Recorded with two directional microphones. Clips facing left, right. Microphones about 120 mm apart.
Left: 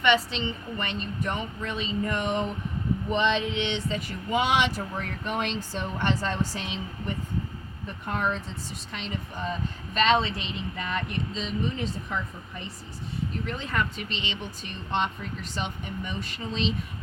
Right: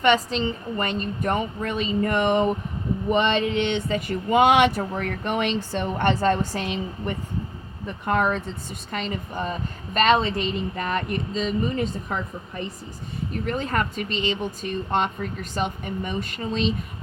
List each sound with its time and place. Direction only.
0.0 s speech: 40° right (ahead or behind); by 7.1 s 55° right (ahead or behind)
8.0 s speech: 75° right (ahead or behind)
8.9 s speech: 55° right (ahead or behind)
13.5 s speech: 50° right (ahead or behind)